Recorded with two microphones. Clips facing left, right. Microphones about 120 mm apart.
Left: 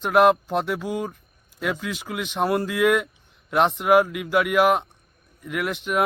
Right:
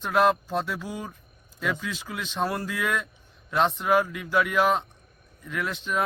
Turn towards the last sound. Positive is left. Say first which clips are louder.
# left 4 dB
turn(degrees=15)  # may be behind; listen again after turning